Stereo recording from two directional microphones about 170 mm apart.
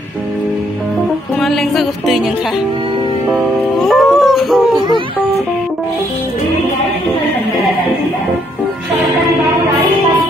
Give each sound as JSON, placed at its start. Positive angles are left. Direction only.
{"t": 1.4, "sound": "music", "side_deg": 0}
{"t": 3.8, "sound": "music", "side_deg": 0}
{"t": 4.7, "sound": "speech", "side_deg": -25}